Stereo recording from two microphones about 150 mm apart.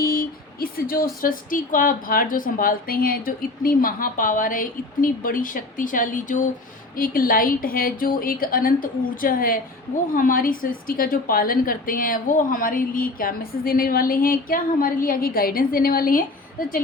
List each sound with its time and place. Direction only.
0.0 s a sound: 75° left (ahead or behind)
1.2 s a woman's voice: 70° left (ahead or behind)
6.9 s a woman's voice: 70° left (ahead or behind)